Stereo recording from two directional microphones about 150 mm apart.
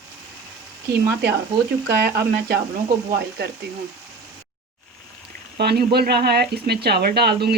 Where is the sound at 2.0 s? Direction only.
90° right.